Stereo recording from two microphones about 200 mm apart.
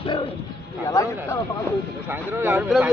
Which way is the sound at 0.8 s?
15° left (ahead or behind).